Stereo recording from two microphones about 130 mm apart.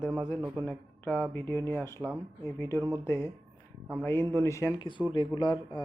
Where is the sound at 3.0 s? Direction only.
20° left (ahead or behind).